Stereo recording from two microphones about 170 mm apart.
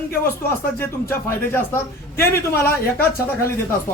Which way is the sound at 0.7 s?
15° left (ahead or behind).